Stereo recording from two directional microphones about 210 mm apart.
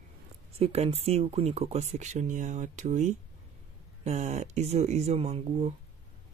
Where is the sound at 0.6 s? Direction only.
30° right (ahead or behind).